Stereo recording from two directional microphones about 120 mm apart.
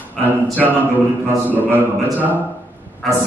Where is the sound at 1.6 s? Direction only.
15° right (ahead or behind).